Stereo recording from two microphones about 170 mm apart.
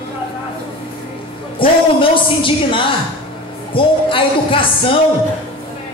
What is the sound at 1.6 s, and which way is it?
A woman's voice, 30° left (ahead or behind).